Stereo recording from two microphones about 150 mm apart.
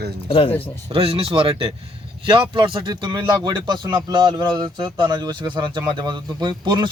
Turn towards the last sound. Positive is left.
turn(degrees=-30)  # may be behind; listen again after turning